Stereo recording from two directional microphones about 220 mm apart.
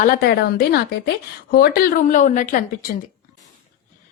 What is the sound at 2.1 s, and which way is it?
Speech, 35° left (ahead or behind).